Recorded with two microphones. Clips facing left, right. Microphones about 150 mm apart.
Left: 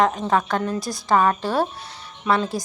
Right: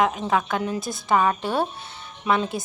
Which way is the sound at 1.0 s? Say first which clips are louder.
Left 2 dB; 5° right (ahead or behind).